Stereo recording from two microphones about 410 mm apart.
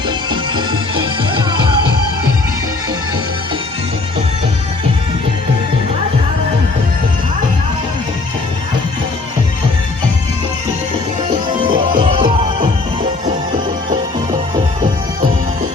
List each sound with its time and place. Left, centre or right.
0.3 s music: centre
11.6 s music: centre
14.5 s music: centre